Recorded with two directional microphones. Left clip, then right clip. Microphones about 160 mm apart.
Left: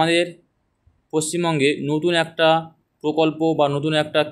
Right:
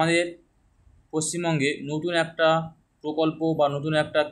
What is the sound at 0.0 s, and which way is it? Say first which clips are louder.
Speech: left 4 dB; 30° left (ahead or behind).